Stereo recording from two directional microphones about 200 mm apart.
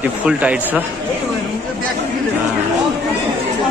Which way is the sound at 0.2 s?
5° right (ahead or behind).